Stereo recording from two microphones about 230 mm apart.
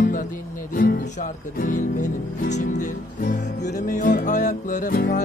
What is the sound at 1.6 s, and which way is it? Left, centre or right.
Music, left.